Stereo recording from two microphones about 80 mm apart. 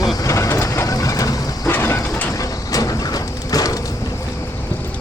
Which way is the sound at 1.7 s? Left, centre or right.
Left.